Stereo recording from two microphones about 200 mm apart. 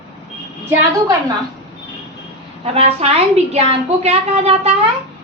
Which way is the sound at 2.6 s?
30° right (ahead or behind).